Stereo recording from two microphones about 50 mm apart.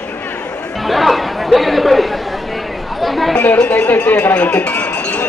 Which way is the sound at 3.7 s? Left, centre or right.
Left.